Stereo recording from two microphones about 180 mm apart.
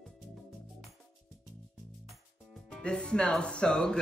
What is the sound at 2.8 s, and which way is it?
Speech, 5° left (ahead or behind).